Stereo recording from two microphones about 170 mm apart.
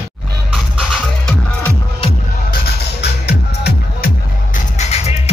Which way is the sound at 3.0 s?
75° left (ahead or behind).